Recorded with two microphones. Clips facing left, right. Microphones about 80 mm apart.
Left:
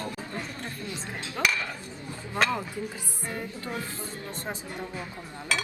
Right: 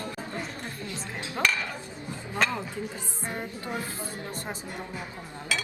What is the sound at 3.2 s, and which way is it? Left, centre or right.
Music, right.